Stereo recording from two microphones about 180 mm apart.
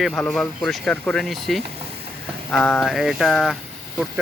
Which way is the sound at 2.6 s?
Centre (ahead or behind).